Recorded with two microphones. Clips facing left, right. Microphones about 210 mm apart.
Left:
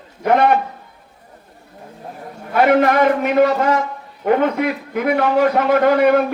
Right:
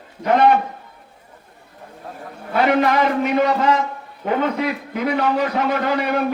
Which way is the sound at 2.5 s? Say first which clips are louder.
Left 3 dB; 55° left (ahead or behind).